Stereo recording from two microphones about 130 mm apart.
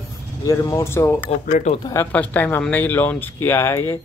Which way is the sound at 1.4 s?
90° left.